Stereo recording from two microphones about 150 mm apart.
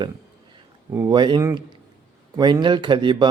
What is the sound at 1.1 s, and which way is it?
Speech, 30° right (ahead or behind).